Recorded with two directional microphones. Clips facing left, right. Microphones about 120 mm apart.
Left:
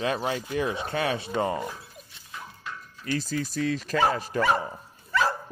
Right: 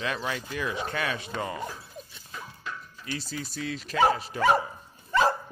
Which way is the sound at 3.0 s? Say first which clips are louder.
Left 7 dB; 45° left (ahead or behind).